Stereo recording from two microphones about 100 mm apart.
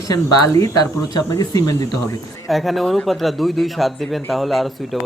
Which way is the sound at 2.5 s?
Centre (ahead or behind).